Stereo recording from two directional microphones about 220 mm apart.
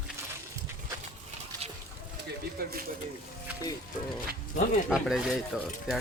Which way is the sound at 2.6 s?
40° right (ahead or behind).